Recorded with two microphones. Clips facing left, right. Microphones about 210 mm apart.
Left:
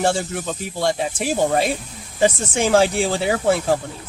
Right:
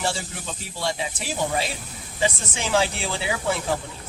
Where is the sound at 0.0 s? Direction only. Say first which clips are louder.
Left 8 dB; 50° left (ahead or behind).